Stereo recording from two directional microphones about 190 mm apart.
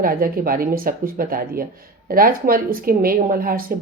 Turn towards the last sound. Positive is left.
turn(degrees=-50)  # may be behind; listen again after turning